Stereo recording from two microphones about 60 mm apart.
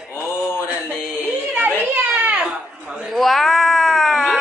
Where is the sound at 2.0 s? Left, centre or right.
Centre.